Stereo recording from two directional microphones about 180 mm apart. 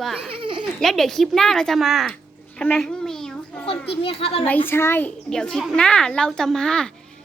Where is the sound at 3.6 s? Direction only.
30° left (ahead or behind).